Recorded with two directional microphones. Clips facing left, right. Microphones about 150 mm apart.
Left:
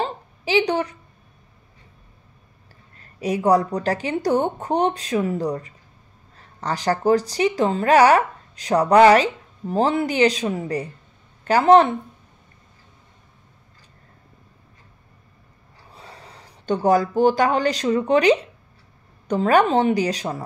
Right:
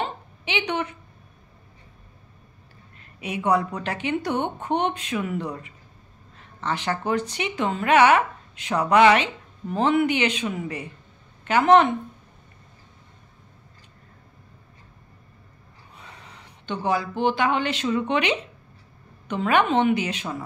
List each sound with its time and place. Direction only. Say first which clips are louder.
0.0 s a sound: left 4 dB; 35° left (ahead or behind)
3.0 s a woman's voice: left 7 dB; 40° left (ahead or behind)
15.9 s a woman's voice: left 3 dB; 35° left (ahead or behind)